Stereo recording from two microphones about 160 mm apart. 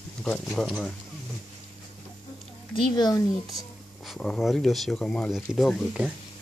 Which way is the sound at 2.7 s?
25° left (ahead or behind).